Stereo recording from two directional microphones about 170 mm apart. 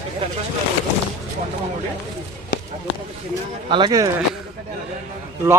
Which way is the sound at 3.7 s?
30° right (ahead or behind).